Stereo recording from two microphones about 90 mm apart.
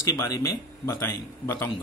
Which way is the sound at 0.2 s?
35° left (ahead or behind).